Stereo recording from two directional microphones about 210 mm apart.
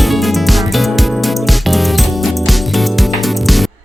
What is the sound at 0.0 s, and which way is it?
Music, centre (ahead or behind).